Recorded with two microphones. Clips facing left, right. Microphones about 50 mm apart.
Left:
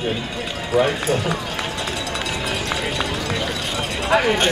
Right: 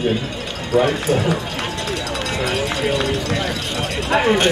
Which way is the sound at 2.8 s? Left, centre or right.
Centre.